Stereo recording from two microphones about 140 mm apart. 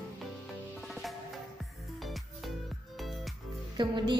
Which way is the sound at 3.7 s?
35° right (ahead or behind).